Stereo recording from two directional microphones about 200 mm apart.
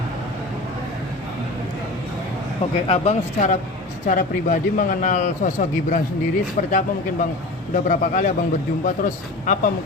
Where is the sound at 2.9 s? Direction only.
35° left (ahead or behind).